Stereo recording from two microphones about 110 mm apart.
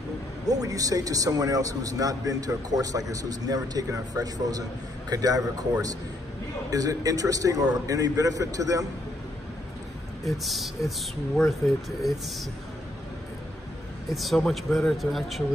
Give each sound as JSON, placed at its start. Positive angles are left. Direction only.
{"t": 0.5, "sound": "speech", "side_deg": -35}
{"t": 10.2, "sound": "speech", "side_deg": 0}
{"t": 14.1, "sound": "speech", "side_deg": 0}